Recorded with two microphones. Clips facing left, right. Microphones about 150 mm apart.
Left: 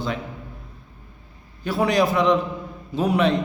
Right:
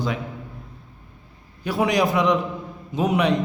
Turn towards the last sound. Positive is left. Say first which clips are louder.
# left 1 dB
turn(degrees=-15)  # may be behind; listen again after turning